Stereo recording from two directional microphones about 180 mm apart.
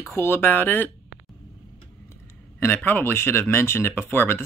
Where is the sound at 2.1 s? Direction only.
10° left (ahead or behind).